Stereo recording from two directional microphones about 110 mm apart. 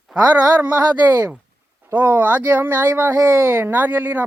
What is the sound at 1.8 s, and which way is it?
Speech, 20° right (ahead or behind).